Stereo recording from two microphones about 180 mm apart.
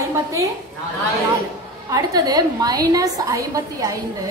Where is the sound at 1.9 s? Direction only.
20° right (ahead or behind).